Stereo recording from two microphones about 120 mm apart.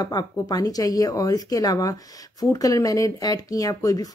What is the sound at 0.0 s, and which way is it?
Speech, 35° left (ahead or behind).